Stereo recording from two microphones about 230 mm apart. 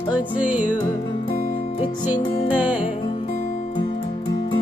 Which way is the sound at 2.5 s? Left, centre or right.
Centre.